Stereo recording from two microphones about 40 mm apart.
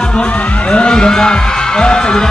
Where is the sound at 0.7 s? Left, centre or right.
Left.